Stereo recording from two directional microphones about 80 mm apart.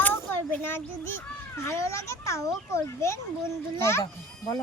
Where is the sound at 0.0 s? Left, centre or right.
Left.